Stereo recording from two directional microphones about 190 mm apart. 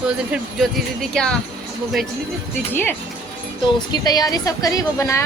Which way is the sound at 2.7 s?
10° left (ahead or behind).